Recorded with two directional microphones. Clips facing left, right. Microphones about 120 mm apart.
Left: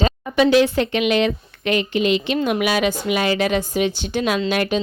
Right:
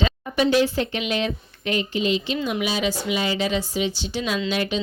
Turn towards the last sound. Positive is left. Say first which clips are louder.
# left 4 dB
turn(degrees=55)  # may be behind; listen again after turning